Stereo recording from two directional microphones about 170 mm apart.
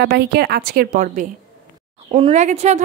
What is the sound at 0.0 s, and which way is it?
A woman's voice, 70° right (ahead or behind).